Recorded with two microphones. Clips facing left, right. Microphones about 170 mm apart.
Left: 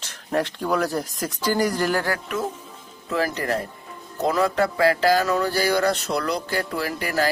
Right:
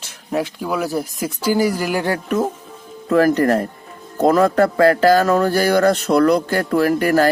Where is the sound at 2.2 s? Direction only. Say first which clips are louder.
Right 7 dB; 45° right (ahead or behind).